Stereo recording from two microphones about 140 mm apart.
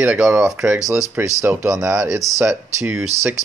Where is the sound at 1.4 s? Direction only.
20° right (ahead or behind).